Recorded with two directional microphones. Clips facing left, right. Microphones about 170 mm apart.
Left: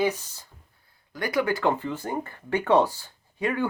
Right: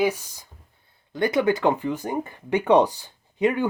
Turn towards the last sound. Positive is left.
turn(degrees=-20)  # may be behind; listen again after turning